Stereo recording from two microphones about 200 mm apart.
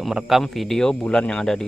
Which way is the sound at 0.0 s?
Centre (ahead or behind).